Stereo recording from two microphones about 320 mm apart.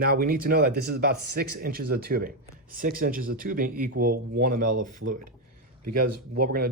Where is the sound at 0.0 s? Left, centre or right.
Right.